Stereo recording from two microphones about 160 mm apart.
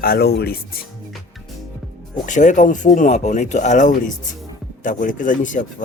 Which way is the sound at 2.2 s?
50° left (ahead or behind).